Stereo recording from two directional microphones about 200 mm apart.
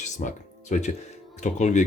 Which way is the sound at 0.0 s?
40° left (ahead or behind).